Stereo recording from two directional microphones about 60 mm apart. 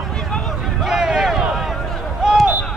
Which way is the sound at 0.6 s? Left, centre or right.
Centre.